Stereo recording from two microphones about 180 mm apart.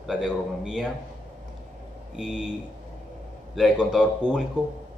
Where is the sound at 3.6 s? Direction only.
5° right (ahead or behind).